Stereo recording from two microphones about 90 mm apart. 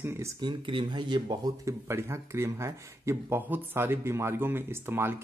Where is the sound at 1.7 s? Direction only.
30° right (ahead or behind).